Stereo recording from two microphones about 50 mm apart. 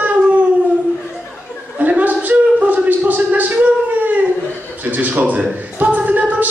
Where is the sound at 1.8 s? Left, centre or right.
Right.